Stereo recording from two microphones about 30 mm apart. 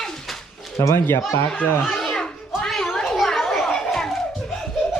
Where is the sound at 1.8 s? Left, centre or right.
Centre.